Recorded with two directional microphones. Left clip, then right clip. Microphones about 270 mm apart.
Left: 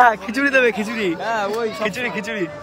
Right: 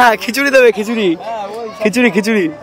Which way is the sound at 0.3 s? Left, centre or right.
Right.